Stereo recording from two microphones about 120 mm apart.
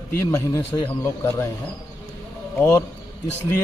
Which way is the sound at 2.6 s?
30° left (ahead or behind).